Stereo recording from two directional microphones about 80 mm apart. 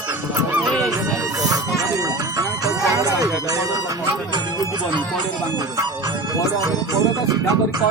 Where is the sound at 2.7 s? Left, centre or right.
Right.